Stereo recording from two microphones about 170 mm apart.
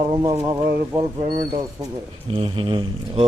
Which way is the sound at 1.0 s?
35° right (ahead or behind).